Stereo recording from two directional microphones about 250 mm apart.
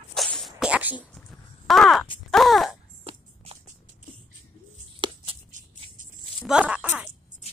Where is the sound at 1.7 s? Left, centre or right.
Centre.